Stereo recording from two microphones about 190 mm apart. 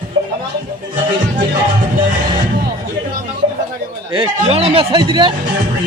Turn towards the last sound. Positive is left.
turn(degrees=-25)  # may be behind; listen again after turning